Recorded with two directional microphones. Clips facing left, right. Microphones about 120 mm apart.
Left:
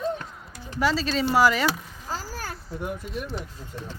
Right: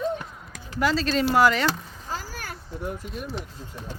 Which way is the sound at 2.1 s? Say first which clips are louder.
Left 1 dB; 35° left (ahead or behind).